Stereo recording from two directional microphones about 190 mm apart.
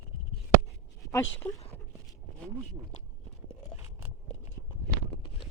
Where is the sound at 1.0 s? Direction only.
15° left (ahead or behind).